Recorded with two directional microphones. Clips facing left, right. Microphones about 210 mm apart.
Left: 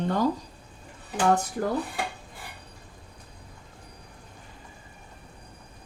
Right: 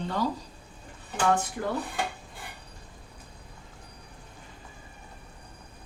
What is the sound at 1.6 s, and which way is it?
Speech, 35° left (ahead or behind).